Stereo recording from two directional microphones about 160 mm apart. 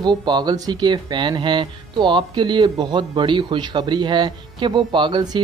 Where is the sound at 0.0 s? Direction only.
30° right (ahead or behind).